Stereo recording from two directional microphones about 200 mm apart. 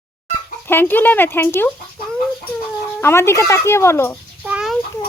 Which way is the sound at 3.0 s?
10° left (ahead or behind).